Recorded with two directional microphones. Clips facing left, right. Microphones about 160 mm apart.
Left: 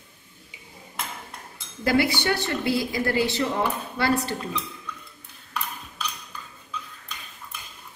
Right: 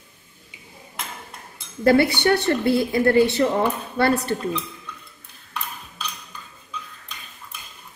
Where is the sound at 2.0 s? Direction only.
60° right (ahead or behind).